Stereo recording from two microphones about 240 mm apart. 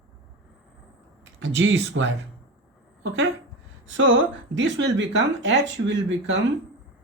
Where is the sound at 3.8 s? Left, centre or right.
Right.